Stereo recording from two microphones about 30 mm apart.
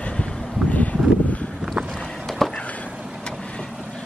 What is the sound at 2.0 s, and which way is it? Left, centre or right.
Vehicle, centre.